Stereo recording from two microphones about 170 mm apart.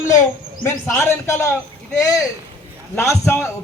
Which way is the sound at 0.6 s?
15° left (ahead or behind).